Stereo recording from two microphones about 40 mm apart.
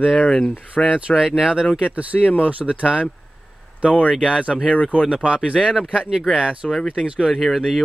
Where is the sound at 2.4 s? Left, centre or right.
Right.